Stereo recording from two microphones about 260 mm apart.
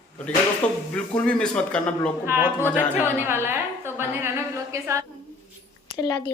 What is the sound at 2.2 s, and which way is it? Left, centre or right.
A woman's voice, centre.